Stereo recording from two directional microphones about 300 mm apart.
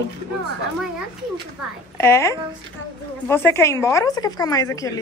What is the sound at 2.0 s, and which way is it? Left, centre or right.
A woman's voice, centre.